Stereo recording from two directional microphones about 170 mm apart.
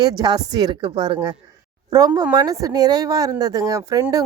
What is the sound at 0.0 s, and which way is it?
Speech, 25° right (ahead or behind).